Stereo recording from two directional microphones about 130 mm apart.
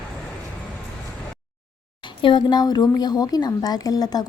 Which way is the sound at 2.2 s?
35° left (ahead or behind).